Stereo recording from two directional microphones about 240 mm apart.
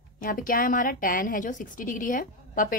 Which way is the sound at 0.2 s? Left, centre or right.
Left.